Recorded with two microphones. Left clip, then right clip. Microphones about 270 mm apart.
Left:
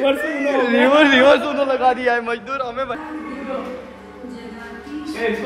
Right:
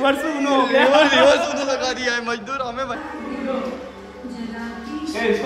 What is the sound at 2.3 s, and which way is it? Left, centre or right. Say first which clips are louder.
Speech: left 1 dB; centre.